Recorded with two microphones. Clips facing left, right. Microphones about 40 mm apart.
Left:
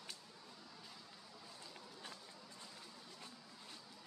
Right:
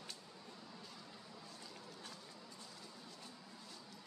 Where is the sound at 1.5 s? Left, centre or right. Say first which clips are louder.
Right 1 dB; centre.